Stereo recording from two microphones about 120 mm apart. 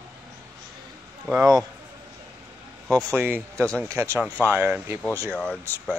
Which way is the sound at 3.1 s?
15° right (ahead or behind).